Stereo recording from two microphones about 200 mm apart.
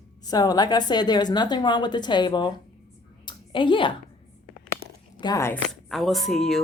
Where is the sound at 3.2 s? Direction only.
25° left (ahead or behind).